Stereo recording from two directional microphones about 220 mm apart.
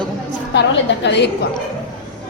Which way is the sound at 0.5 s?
50° left (ahead or behind).